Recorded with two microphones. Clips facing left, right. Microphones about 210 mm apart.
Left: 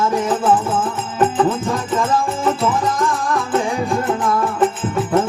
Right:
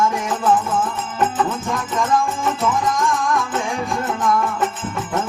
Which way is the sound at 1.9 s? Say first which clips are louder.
Right 1 dB; 35° left (ahead or behind).